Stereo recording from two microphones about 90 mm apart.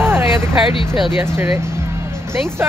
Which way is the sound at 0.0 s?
25° right (ahead or behind).